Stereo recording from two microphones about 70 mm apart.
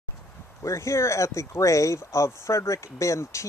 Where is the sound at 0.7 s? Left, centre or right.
Left.